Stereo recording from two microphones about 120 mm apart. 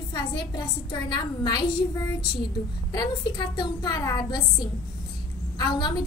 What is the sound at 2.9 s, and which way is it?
A woman's voice, 35° left (ahead or behind).